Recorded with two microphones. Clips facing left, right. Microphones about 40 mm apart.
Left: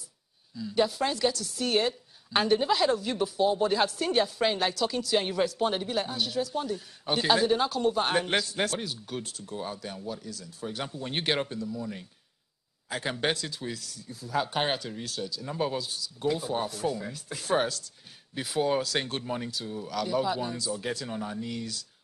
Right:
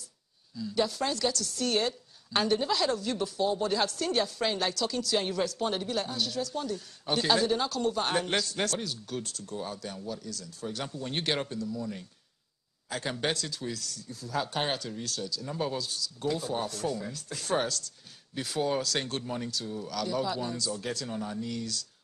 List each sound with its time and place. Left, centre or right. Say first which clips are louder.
0.6 s a woman's voice: left 3 dB; centre